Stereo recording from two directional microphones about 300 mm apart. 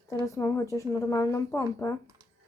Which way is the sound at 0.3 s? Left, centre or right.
Centre.